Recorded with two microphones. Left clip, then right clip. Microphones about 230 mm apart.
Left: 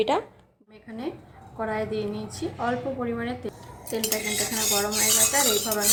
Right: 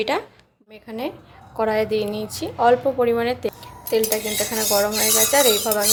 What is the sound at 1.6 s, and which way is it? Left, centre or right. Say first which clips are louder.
A woman's voice: right 8 dB; right.